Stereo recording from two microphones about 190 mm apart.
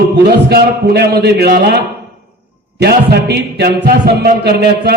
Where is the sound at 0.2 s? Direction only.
60° right (ahead or behind).